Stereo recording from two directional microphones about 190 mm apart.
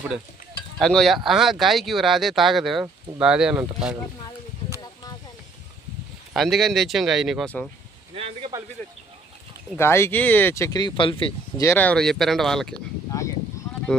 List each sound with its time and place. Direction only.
0.7 s speech: centre (ahead or behind)
6.3 s speech: centre (ahead or behind)
8.1 s speech: 30° right (ahead or behind)
9.8 s speech: 15° left (ahead or behind)
11.6 s speech: 5° left (ahead or behind)